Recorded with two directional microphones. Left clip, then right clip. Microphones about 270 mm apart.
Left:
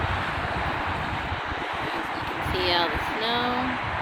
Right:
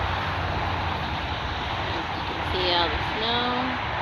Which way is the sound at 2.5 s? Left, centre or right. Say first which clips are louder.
Even; left.